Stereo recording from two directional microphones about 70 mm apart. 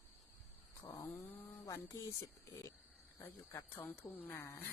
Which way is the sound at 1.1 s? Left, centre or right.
Left.